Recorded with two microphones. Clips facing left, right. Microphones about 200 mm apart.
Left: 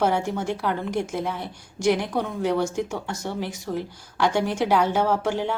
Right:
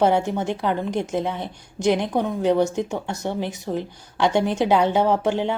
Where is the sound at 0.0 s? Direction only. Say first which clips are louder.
Right 4 dB; 20° right (ahead or behind).